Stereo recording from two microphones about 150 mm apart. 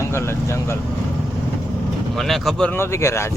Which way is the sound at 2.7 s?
15° left (ahead or behind).